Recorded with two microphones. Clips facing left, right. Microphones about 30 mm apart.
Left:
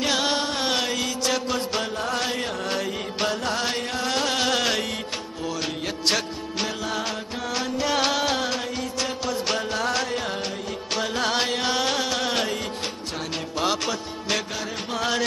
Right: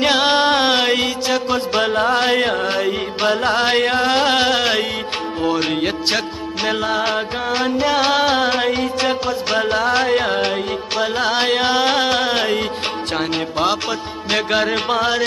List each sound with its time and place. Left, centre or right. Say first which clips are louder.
0.0 s music: right 9 dB; right
1.2 s music: right 6 dB; right
1.8 s music: right 10 dB; right
2.6 s music: right 8 dB; right
4.0 s music: right 8 dB; right
5.4 s music: right 11 dB; right
6.0 s music: right 4 dB; right
9.6 s music: right 8 dB; right
10.0 s music: right 11 dB; right
11.0 s music: right 6 dB; right
13.7 s music: right 5 dB; right
14.5 s music: right 13 dB; right
15.0 s music: right 3 dB; right